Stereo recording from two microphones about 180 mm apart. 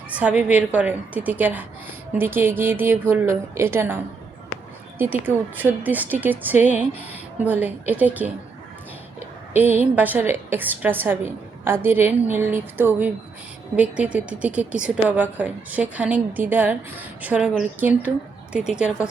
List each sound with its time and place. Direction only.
0.1 s speech: 10° right (ahead or behind)
9.5 s speech: 10° right (ahead or behind)